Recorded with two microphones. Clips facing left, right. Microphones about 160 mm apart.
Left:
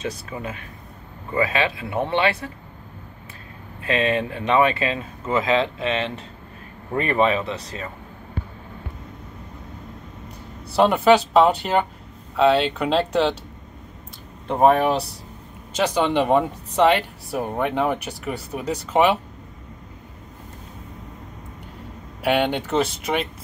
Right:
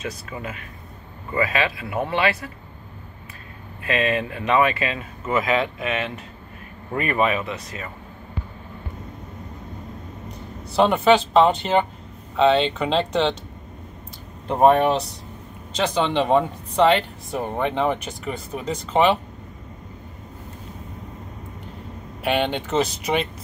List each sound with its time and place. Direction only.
0.0 s speech: 30° left (ahead or behind)
3.8 s speech: 30° left (ahead or behind)
10.8 s speech: 5° left (ahead or behind)
14.5 s speech: centre (ahead or behind)
22.3 s speech: 10° left (ahead or behind)
22.7 s speech: centre (ahead or behind)